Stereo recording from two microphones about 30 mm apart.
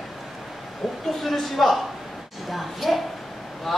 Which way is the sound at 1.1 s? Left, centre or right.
Centre.